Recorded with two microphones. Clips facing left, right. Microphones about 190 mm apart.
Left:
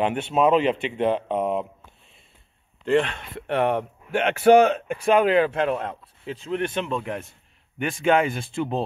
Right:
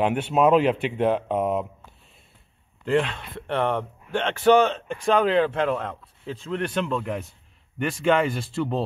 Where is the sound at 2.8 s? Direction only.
Centre (ahead or behind).